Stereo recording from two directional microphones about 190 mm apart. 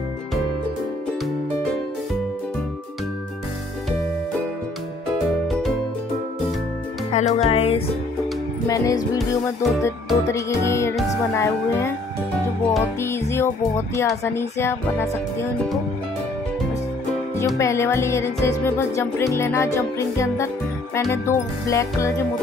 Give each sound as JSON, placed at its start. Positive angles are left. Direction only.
{"t": 5.5, "sound": "music", "side_deg": 0}
{"t": 7.1, "sound": "music", "side_deg": 35}
{"t": 8.6, "sound": "music", "side_deg": 20}
{"t": 17.6, "sound": "music", "side_deg": 15}